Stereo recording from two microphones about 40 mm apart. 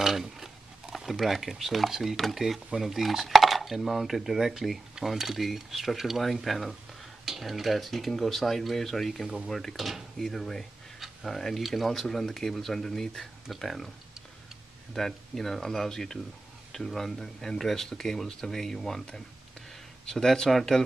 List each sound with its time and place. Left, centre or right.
0.0 s a sound: centre
0.9 s dishes: centre
10.1 s speech: centre
11.2 s dishes: centre
15.0 s speech: centre
20.1 s speech: centre